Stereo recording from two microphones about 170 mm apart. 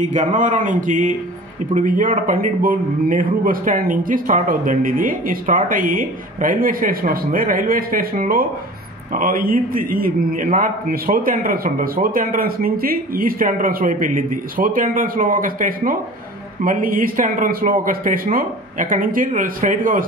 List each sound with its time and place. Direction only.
0.0 s a man's voice: 45° right (ahead or behind)